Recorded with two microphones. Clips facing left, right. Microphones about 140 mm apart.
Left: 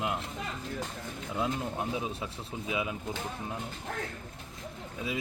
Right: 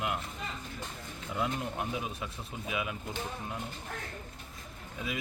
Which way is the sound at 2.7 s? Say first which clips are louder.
Left 2 dB; 25° left (ahead or behind).